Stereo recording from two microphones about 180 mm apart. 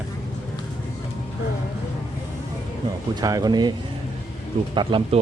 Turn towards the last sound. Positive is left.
turn(degrees=-25)  # may be behind; listen again after turning